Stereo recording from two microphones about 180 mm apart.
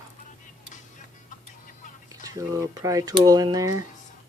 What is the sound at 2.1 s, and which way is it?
Speech, 20° right (ahead or behind).